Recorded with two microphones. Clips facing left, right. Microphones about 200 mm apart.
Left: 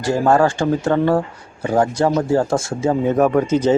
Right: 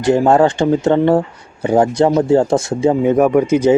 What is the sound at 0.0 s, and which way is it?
Speech, 20° right (ahead or behind).